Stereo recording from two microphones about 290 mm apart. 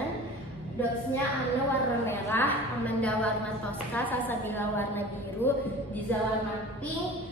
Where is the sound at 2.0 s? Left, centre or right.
Centre.